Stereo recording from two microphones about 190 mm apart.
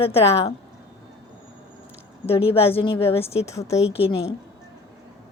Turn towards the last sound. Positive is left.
turn(degrees=30)  # may be behind; listen again after turning